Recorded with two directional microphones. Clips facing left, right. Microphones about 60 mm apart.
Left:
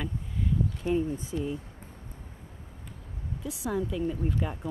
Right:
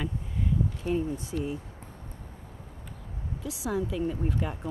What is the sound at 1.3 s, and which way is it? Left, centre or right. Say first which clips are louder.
Speech: even; right.